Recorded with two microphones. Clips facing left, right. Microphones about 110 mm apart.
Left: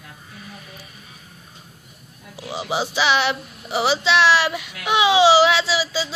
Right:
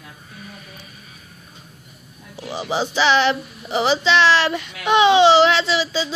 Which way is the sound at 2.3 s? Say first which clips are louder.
Right 1 dB; 10° left (ahead or behind).